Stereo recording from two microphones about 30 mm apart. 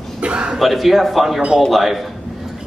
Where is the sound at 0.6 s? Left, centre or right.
Centre.